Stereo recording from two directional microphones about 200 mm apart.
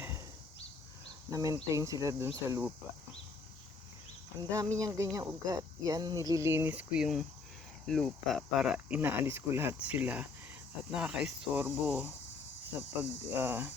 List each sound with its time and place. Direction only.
1.3 s speech: 20° right (ahead or behind)
4.4 s speech: 15° right (ahead or behind)